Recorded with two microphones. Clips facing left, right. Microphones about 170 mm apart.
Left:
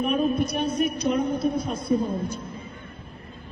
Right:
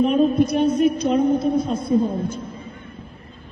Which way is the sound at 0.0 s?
25° right (ahead or behind).